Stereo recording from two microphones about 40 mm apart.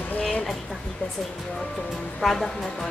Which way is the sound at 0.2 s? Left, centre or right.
Left.